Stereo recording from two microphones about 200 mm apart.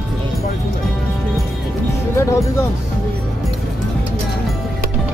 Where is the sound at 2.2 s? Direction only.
15° left (ahead or behind).